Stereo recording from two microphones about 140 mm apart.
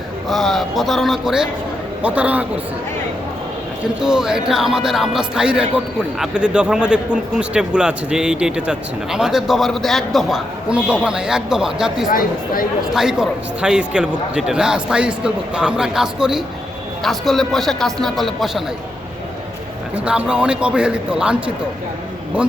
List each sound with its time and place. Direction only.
0.3 s a man's voice: centre (ahead or behind)
4.0 s speech: 5° right (ahead or behind)
20.1 s a man's voice: 5° right (ahead or behind)